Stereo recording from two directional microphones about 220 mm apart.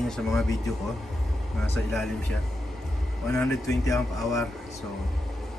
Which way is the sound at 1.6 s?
5° left (ahead or behind).